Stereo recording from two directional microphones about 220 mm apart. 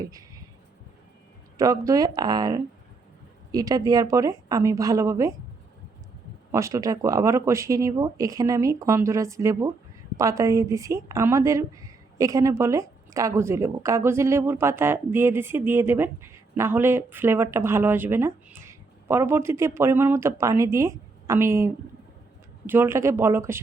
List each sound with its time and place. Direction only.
0.0 s speech: 15° right (ahead or behind)
1.5 s a woman's voice: 15° right (ahead or behind)
6.5 s a woman's voice: 15° right (ahead or behind)